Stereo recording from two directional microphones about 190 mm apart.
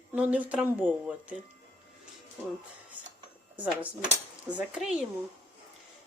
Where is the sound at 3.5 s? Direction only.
5° right (ahead or behind).